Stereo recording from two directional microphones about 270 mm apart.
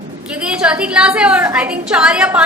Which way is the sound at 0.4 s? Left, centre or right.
Centre.